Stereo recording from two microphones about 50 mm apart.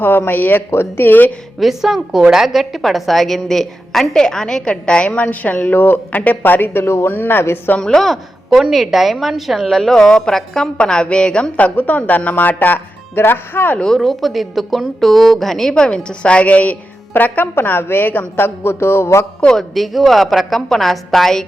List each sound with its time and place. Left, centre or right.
0.0 s speech: left
0.7 s speech: left
1.5 s a woman's voice: centre; by 5.1 s left
5.1 s speech: left
6.1 s speech: left
6.8 s speech: left
7.8 s a woman's voice: centre
8.7 s a woman's voice: centre
11.5 s speech: left
14.0 s a woman's voice: centre
15.7 s a woman's voice: centre; by 17.5 s left
17.5 s speech: left
19.5 s a woman's voice: centre